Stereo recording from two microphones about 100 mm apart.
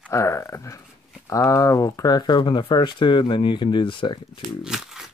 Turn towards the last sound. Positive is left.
turn(degrees=-5)  # may be behind; listen again after turning